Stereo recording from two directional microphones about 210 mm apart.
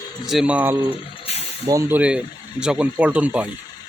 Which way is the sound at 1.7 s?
10° right (ahead or behind).